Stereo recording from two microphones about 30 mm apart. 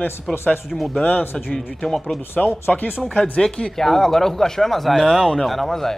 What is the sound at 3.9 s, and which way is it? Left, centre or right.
Speech, centre.